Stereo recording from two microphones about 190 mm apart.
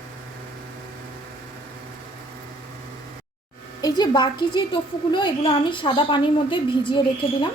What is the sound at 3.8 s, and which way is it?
A woman's voice, 20° left (ahead or behind).